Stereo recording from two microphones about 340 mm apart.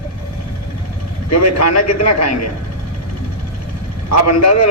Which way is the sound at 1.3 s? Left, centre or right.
Left.